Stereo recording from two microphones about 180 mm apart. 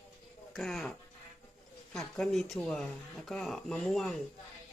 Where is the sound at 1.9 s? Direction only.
Centre (ahead or behind).